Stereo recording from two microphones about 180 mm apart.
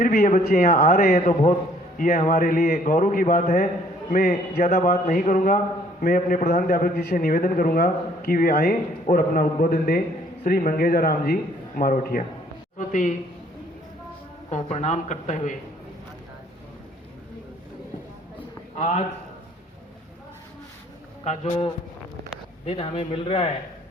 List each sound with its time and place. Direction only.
0.0 s a man's voice: 55° left (ahead or behind)
1.2 s speech: 40° left (ahead or behind)
2.1 s a man's voice: 50° left (ahead or behind)
14.5 s speech: 40° left (ahead or behind)
18.8 s speech: 40° left (ahead or behind)
21.2 s speech: 30° left (ahead or behind)